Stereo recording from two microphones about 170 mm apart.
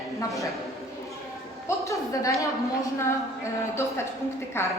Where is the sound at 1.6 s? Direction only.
20° left (ahead or behind).